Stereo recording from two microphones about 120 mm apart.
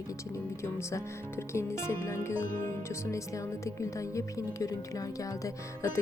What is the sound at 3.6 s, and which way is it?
Speech, 25° left (ahead or behind).